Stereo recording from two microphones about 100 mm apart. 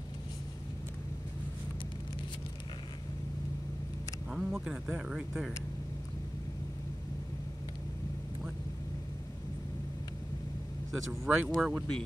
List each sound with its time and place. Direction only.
4.3 s speech: 5° right (ahead or behind)
10.9 s speech: 5° right (ahead or behind)